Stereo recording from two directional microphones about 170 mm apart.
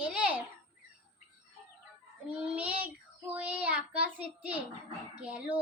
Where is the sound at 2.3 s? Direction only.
10° right (ahead or behind).